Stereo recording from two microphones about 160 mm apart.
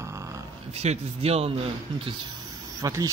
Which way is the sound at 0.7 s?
40° right (ahead or behind).